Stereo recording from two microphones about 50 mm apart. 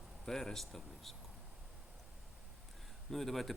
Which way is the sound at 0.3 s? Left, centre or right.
Centre.